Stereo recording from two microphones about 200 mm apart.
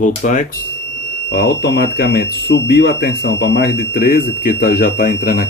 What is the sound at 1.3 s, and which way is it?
Speech, 55° left (ahead or behind).